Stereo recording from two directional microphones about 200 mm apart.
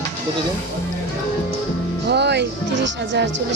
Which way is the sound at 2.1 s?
60° right (ahead or behind).